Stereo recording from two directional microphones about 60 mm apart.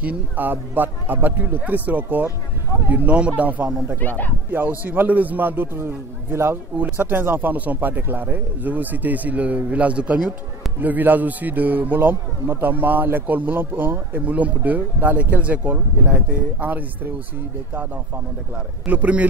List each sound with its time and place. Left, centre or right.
0.0 s a man's voice: right
4.0 s speech: left
4.5 s a man's voice: right
6.8 s a man's voice: right; by 10.3 s centre
10.8 s a man's voice: right
18.9 s a man's voice: right